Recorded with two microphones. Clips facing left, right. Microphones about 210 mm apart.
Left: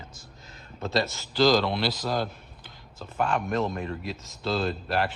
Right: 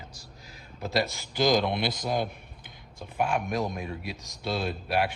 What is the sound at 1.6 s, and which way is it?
Speech, 55° right (ahead or behind).